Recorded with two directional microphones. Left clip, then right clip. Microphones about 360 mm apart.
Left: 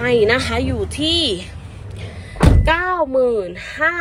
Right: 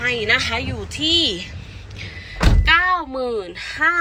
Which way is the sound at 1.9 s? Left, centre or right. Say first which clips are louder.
Left 3 dB; centre.